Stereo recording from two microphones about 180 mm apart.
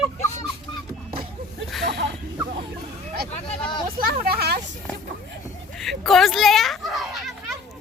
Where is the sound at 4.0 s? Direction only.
60° right (ahead or behind).